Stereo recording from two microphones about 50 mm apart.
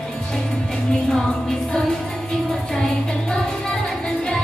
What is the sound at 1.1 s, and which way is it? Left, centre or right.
Music, centre.